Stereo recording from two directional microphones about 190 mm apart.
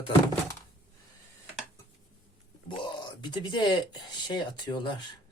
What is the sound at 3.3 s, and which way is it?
Speech, 25° left (ahead or behind).